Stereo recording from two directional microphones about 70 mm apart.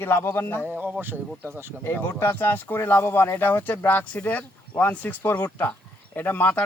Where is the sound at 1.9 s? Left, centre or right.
Left.